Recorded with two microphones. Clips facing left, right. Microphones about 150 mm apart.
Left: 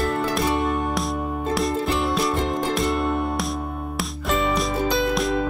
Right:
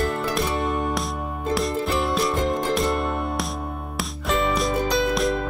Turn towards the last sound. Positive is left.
turn(degrees=0)  # may be behind; listen again after turning